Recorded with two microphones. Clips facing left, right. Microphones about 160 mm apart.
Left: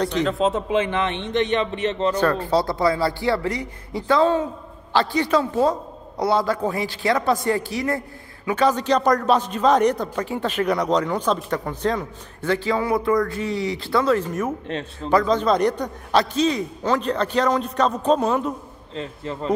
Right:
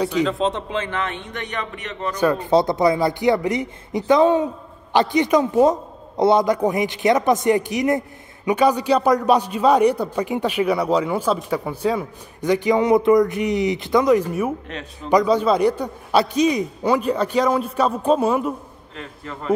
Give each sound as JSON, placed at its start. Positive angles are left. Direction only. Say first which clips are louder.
{"t": 0.0, "sound": "a man's voice", "louder": "right 1 dB", "side_deg": -10}
{"t": 0.4, "sound": "a man's voice", "louder": "left 3 dB", "side_deg": 5}
{"t": 2.1, "sound": "a man's voice", "louder": "right 3 dB", "side_deg": -15}
{"t": 18.9, "sound": "a man's voice", "louder": "left 5 dB", "side_deg": 25}